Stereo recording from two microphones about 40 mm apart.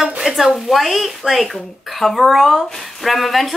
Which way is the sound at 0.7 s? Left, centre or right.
Centre.